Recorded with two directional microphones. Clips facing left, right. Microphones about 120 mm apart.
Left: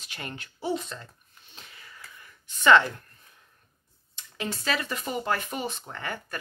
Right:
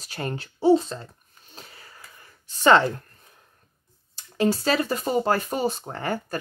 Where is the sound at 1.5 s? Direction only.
40° right (ahead or behind).